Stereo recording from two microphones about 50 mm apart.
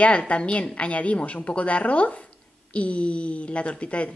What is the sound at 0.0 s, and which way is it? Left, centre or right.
A woman's voice, left.